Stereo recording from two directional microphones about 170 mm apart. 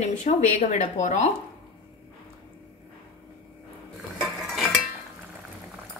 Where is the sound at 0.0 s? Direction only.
45° left (ahead or behind).